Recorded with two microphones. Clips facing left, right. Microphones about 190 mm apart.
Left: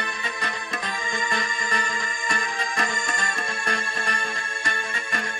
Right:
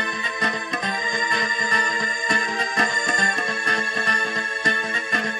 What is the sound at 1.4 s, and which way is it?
Music, 40° right (ahead or behind).